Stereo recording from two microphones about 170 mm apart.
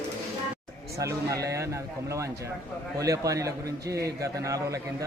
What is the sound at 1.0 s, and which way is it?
Speech, 20° right (ahead or behind).